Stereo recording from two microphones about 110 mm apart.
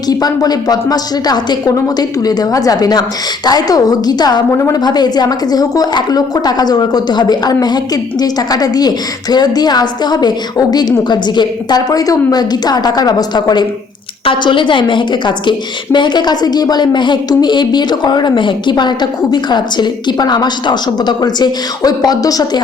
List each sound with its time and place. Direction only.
0.1 s a woman's voice: 35° left (ahead or behind)